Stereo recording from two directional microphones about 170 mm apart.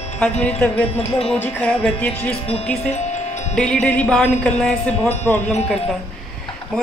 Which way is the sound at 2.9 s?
45° left (ahead or behind).